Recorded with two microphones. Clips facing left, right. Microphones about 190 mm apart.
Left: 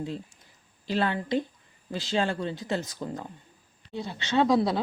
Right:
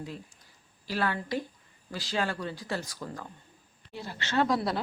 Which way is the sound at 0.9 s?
20° left (ahead or behind).